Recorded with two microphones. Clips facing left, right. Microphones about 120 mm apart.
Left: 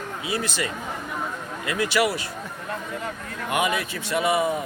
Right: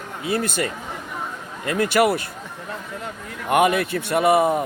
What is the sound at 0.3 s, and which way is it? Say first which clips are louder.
Speech: right 5 dB; 50° right (ahead or behind).